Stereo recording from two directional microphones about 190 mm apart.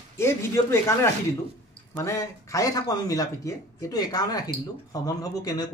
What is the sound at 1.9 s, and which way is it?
Speech, 15° left (ahead or behind).